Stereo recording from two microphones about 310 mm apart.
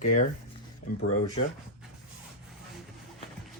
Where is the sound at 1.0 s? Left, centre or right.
Left.